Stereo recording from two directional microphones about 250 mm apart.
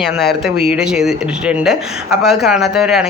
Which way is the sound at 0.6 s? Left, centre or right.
Centre.